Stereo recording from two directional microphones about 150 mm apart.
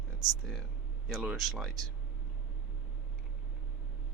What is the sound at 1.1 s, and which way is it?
Speech, 5° right (ahead or behind).